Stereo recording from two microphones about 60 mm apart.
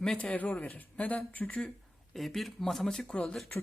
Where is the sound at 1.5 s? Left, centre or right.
Centre.